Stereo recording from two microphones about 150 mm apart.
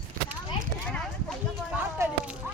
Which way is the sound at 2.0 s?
20° right (ahead or behind).